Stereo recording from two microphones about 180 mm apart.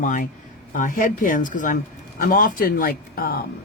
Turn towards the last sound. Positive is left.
turn(degrees=55)  # may be behind; listen again after turning